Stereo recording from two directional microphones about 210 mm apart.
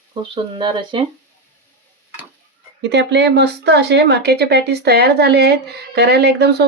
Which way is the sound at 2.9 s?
55° right (ahead or behind).